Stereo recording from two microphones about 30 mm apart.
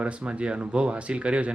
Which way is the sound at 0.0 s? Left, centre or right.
Right.